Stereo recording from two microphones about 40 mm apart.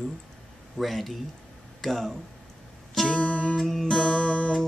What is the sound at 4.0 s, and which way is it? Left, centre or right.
Music, left.